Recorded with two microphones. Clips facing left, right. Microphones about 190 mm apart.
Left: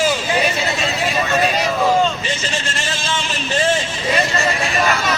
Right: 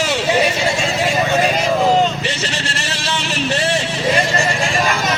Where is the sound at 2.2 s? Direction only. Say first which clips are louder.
Right 1 dB; 75° right (ahead or behind).